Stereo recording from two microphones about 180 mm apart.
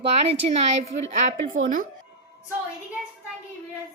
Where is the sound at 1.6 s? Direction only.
45° right (ahead or behind).